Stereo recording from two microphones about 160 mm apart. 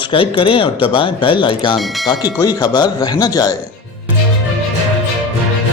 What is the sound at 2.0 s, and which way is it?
Speech, 25° left (ahead or behind).